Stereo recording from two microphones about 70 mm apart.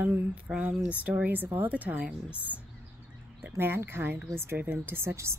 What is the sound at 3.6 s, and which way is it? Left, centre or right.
Speech, right.